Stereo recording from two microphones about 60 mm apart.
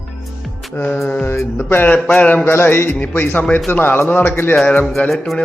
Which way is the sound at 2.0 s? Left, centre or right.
Left.